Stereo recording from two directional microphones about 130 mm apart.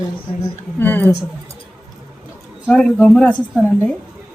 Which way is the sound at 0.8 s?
15° left (ahead or behind).